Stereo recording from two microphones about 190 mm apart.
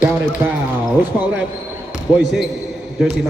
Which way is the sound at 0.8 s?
10° right (ahead or behind).